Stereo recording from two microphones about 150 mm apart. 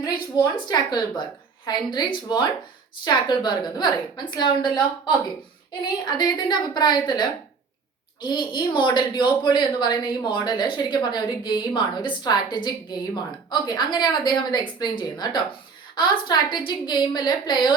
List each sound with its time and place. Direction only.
0.0 s a woman's voice: 30° left (ahead or behind)